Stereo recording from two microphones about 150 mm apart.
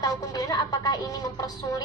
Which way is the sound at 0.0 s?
25° left (ahead or behind).